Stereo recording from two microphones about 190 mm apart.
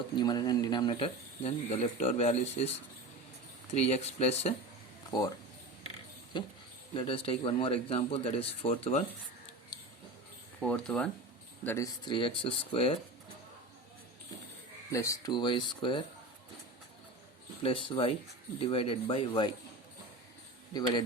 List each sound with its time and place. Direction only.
0.2 s speech: 20° left (ahead or behind)
3.8 s speech: 35° left (ahead or behind)
5.1 s speech: 20° left (ahead or behind)
6.3 s speech: 25° left (ahead or behind)
10.6 s speech: 5° left (ahead or behind)
12.0 s speech: 25° left (ahead or behind)
14.8 s speech: 15° left (ahead or behind)
17.6 s speech: 30° left (ahead or behind)